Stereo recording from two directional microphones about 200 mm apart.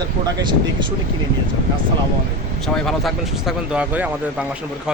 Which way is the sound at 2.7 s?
Centre (ahead or behind).